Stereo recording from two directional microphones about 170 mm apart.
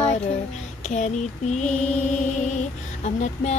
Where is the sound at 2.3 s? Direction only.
45° left (ahead or behind).